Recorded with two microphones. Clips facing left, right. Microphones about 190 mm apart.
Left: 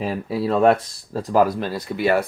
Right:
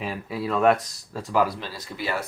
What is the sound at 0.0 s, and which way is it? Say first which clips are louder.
Speech: left 6 dB; 35° left (ahead or behind).